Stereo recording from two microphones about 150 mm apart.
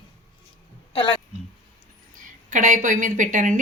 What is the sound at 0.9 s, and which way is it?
Speech, 35° left (ahead or behind).